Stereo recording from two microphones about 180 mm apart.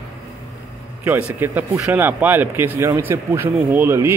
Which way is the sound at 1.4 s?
10° right (ahead or behind).